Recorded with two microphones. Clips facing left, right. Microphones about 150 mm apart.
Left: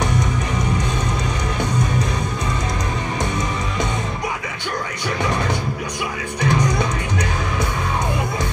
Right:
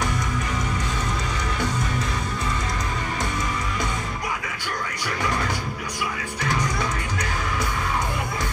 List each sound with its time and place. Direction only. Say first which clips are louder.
6.4 s music: left 6 dB; 20° left (ahead or behind)